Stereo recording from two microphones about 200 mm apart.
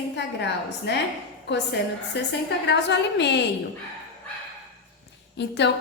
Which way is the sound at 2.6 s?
60° left (ahead or behind).